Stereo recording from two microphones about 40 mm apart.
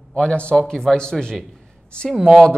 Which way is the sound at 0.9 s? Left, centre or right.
Centre.